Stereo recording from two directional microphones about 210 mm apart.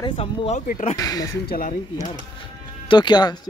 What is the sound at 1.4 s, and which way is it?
Speech, 45° left (ahead or behind).